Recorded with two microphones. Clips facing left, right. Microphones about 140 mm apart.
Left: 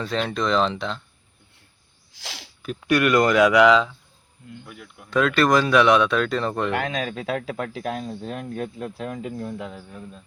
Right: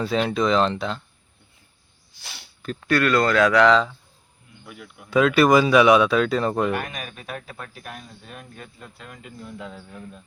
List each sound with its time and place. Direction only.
0.0 s speech: 5° right (ahead or behind)
2.1 s a sound: 90° left
2.8 s speech: 15° left (ahead or behind); by 6.7 s 5° right (ahead or behind)
6.7 s speech: 90° left
9.6 s speech: 20° left (ahead or behind)